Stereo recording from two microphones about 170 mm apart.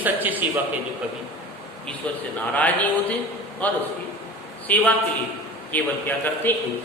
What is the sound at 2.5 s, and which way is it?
A man's voice, 10° left (ahead or behind).